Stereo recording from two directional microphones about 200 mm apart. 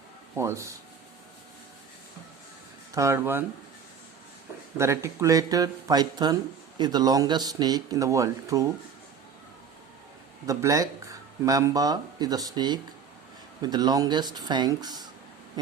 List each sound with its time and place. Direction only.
0.3 s speech: 15° right (ahead or behind)
2.9 s speech: 15° right (ahead or behind)
4.8 s speech: 15° right (ahead or behind)
10.4 s speech: 15° right (ahead or behind)